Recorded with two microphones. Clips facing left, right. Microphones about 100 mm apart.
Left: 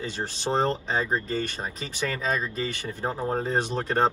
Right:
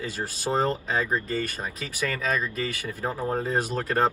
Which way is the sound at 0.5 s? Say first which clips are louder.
Even; 30° left (ahead or behind).